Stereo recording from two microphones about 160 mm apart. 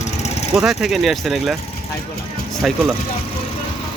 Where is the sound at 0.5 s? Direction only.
Centre (ahead or behind).